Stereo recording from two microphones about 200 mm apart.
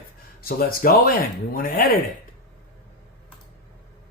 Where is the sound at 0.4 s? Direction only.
45° left (ahead or behind).